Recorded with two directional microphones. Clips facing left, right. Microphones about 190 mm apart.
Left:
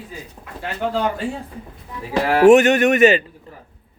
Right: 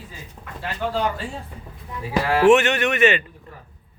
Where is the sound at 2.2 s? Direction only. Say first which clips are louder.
Left 5 dB; 40° left (ahead or behind).